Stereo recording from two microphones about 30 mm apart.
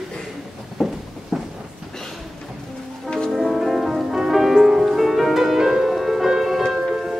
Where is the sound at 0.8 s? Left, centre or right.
Centre.